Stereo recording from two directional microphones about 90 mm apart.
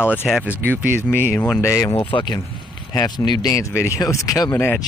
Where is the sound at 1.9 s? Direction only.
60° left (ahead or behind).